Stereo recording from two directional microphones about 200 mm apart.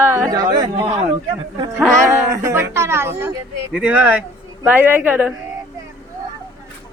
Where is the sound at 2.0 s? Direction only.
15° right (ahead or behind).